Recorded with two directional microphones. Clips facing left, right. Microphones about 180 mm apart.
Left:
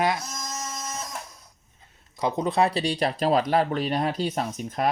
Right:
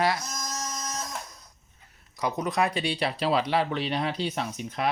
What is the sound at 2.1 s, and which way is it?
Speech, 25° left (ahead or behind).